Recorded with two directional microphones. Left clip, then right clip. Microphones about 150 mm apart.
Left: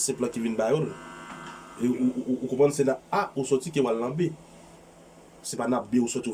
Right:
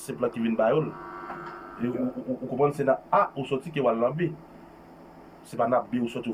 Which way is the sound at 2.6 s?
15° left (ahead or behind).